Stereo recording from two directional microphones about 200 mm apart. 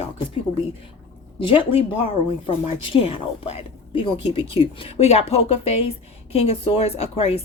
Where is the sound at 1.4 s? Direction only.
25° left (ahead or behind).